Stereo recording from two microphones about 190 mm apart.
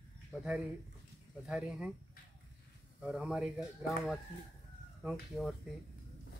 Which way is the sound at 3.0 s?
5° right (ahead or behind).